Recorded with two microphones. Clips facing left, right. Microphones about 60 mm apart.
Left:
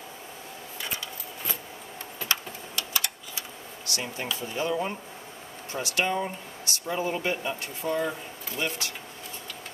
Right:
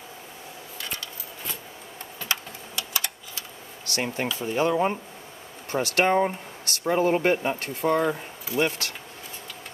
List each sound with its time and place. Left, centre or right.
2.2 s a sound: centre
3.9 s speech: right
5.7 s speech: right
8.6 s speech: right